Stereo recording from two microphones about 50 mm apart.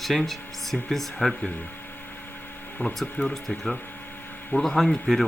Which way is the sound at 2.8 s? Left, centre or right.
Left.